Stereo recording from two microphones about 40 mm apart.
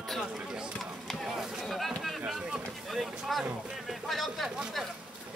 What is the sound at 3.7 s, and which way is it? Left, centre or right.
Music, centre.